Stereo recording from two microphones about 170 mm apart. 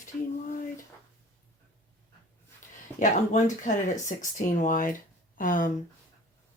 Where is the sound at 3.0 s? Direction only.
50° left (ahead or behind).